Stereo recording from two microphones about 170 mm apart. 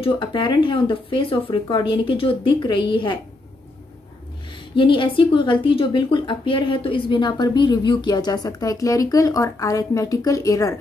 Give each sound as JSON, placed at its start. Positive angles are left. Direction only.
{"t": 0.0, "sound": "speech", "side_deg": 30}
{"t": 4.7, "sound": "speech", "side_deg": 30}